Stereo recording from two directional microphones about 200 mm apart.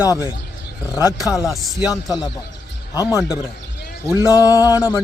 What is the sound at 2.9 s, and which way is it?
A man's voice, 15° left (ahead or behind).